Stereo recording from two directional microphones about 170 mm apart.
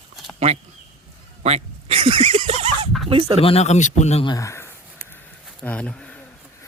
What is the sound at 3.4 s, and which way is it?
Speech, 35° left (ahead or behind).